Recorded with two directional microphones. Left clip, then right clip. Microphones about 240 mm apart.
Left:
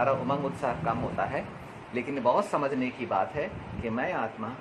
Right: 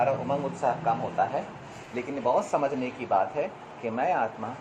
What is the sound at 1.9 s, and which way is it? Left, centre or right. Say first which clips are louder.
Speech: even; left.